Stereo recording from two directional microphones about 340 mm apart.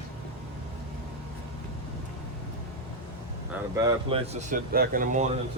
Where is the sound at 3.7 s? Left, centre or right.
Centre.